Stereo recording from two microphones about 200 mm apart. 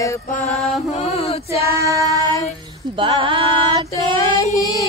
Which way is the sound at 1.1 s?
30° left (ahead or behind).